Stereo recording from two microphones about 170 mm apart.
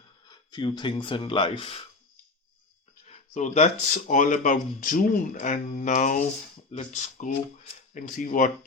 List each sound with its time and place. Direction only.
0.3 s speech: 25° left (ahead or behind)
3.1 s speech: 40° left (ahead or behind)